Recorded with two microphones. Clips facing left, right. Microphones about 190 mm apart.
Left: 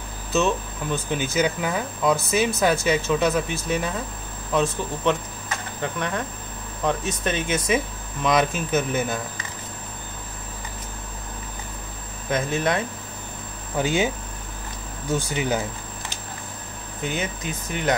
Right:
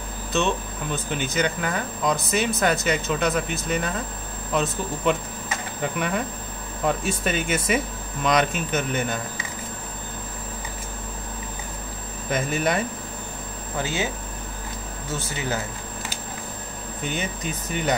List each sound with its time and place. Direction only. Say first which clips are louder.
0.3 s speech: left 2 dB; centre (ahead or behind)
5.8 s speech: right 2 dB; 10° right (ahead or behind)
12.3 s speech: left 1 dB; centre (ahead or behind)
13.8 s speech: left 6 dB; 15° left (ahead or behind)
15.1 s speech: left 4 dB; 15° left (ahead or behind)
17.0 s speech: left 1 dB; 5° left (ahead or behind)